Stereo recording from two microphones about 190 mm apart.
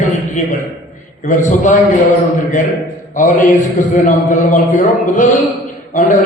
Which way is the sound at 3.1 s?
45° left (ahead or behind).